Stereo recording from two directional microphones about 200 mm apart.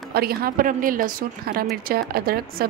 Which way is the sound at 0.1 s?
50° right (ahead or behind).